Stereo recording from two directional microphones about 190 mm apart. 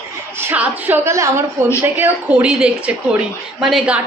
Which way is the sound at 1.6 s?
40° right (ahead or behind).